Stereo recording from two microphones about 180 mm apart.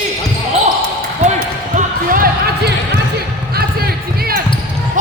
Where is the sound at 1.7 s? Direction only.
50° right (ahead or behind).